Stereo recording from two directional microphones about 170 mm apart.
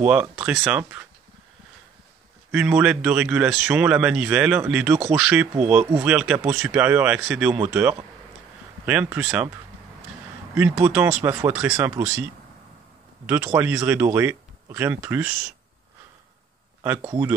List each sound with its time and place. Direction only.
0.0 s speech: 10° right (ahead or behind)
2.5 s speech: 5° right (ahead or behind)
8.8 s speech: 10° right (ahead or behind)
10.5 s speech: 10° right (ahead or behind)
13.3 s speech: 15° right (ahead or behind)
16.8 s speech: 15° right (ahead or behind)